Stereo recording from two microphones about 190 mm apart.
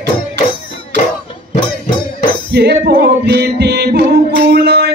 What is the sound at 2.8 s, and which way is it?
Music, 55° right (ahead or behind).